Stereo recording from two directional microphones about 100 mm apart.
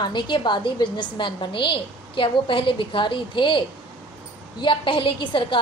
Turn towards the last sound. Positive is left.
turn(degrees=55)  # may be behind; listen again after turning